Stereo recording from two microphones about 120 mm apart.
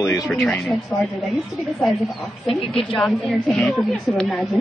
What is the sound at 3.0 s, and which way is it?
A woman's voice, 5° left (ahead or behind).